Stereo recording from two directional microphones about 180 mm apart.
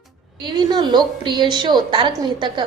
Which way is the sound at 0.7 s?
25° right (ahead or behind).